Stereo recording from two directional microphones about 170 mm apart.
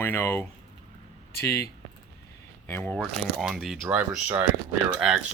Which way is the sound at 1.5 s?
15° left (ahead or behind).